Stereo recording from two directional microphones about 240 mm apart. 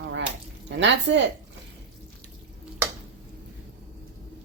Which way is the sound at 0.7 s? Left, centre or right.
Right.